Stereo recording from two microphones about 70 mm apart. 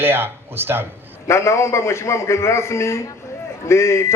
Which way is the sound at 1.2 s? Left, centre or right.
Left.